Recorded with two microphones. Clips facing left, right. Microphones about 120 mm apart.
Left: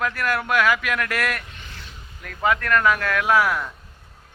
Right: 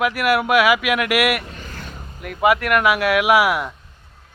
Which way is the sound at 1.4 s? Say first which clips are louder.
Right 7 dB; 40° right (ahead or behind).